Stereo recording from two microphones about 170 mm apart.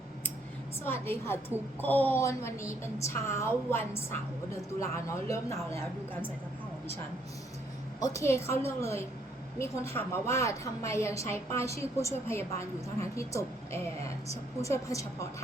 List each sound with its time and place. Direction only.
0.9 s a woman's voice: 15° left (ahead or behind)
7.9 s a woman's voice: 20° left (ahead or behind)